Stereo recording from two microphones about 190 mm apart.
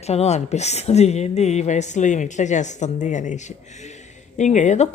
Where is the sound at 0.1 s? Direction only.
35° left (ahead or behind).